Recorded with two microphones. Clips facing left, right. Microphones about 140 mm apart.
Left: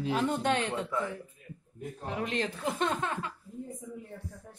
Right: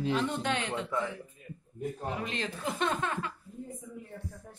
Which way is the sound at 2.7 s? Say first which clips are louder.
Right 1 dB; 20° left (ahead or behind).